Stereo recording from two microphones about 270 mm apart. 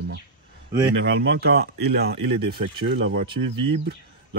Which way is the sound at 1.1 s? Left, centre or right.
Right.